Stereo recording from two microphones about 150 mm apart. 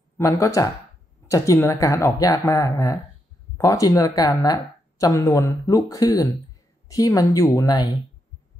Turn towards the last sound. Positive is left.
turn(degrees=25)  # may be behind; listen again after turning